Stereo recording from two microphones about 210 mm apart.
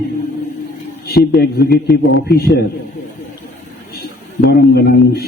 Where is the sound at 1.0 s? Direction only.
50° left (ahead or behind).